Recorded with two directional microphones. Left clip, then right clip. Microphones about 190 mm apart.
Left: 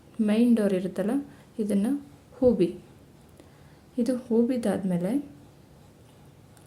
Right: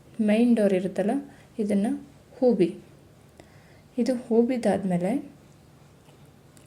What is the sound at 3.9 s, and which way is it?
A woman's voice, centre (ahead or behind).